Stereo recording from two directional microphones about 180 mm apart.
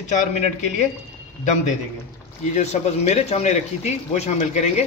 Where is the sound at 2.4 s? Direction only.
40° left (ahead or behind).